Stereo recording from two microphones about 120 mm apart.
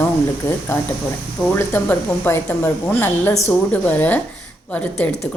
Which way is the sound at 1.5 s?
15° left (ahead or behind).